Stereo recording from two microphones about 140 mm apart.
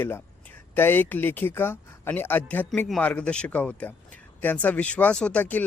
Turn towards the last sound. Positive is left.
turn(degrees=10)  # may be behind; listen again after turning